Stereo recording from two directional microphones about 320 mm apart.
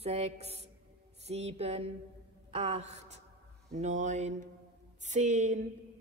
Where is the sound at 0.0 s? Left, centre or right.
Centre.